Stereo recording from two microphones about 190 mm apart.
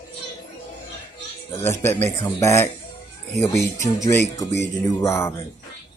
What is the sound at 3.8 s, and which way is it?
Speech, 15° left (ahead or behind).